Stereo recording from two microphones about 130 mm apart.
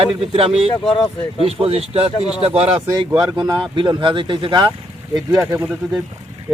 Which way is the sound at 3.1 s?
35° right (ahead or behind).